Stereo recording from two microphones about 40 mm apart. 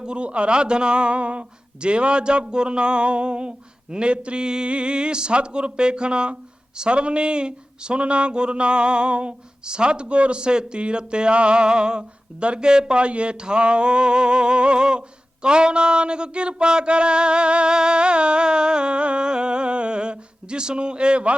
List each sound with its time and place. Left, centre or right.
0.0 s speech: right